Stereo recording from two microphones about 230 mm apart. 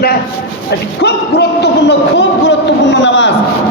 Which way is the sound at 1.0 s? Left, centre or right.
Left.